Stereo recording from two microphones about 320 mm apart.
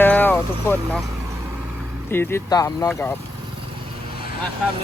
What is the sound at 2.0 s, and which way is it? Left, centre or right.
Speech, centre.